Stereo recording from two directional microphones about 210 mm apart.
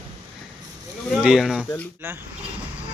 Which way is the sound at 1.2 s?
Centre (ahead or behind).